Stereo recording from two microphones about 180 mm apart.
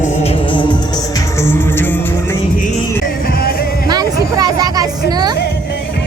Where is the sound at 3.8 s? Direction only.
20° right (ahead or behind).